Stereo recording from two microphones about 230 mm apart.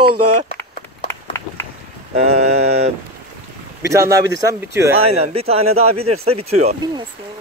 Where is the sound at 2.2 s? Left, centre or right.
Right.